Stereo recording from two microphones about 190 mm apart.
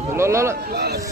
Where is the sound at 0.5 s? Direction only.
55° right (ahead or behind).